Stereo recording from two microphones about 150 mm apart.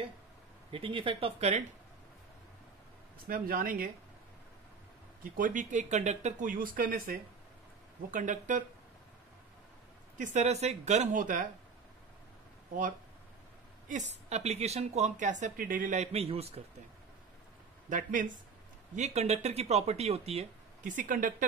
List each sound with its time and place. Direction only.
0.7 s speech: 35° right (ahead or behind)
3.3 s speech: 70° right (ahead or behind)
5.2 s speech: 65° right (ahead or behind)
10.1 s a woman's voice: 55° right (ahead or behind)
13.8 s a woman's voice: 50° right (ahead or behind); by 16.0 s 70° right (ahead or behind)
16.0 s a woman's voice: 40° right (ahead or behind)
17.8 s speech: 60° right (ahead or behind)
18.9 s a woman's voice: 50° right (ahead or behind)
20.8 s speech: 60° right (ahead or behind)